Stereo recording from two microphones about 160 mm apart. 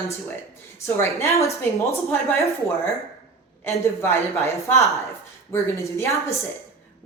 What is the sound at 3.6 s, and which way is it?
A woman's voice, 15° left (ahead or behind).